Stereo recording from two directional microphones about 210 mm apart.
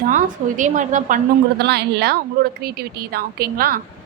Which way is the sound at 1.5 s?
50° right (ahead or behind).